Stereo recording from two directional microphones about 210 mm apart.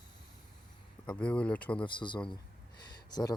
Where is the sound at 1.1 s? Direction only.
5° left (ahead or behind).